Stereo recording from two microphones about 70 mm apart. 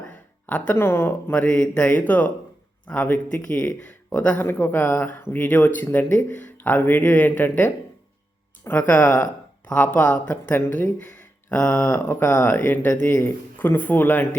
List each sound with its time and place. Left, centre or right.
0.4 s speech: left
0.8 s speech: left
1.4 s speech: centre
4.4 s speech: left
11.4 s a sound: centre
11.7 s speech: left
12.2 s speech: left